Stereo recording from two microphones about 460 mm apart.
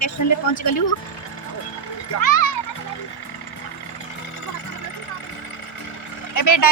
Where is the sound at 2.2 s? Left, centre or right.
Left.